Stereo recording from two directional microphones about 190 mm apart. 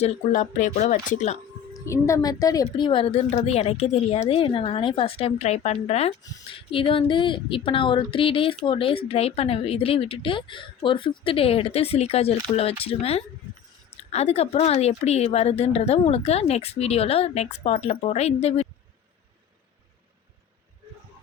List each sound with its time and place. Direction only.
0.0 s a woman's voice: 40° left (ahead or behind)
1.7 s a woman's voice: 15° left (ahead or behind); by 18.7 s 35° left (ahead or behind)